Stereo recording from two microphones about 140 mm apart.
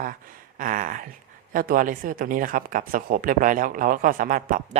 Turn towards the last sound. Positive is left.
turn(degrees=-70)  # may be behind; listen again after turning